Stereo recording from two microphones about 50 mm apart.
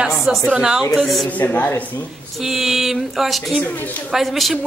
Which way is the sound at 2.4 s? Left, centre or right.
Centre.